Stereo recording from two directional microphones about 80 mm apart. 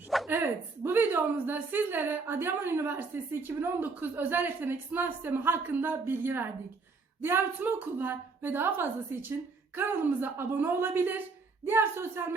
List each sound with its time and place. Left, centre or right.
0.3 s a woman's voice: right